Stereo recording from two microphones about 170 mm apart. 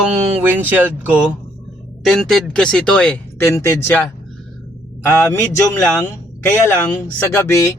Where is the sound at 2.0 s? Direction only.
Centre (ahead or behind).